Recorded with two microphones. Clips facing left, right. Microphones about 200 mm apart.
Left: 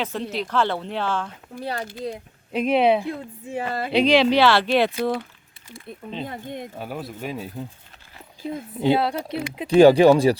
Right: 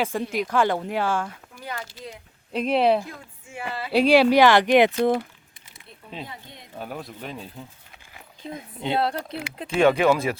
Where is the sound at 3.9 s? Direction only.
10° right (ahead or behind).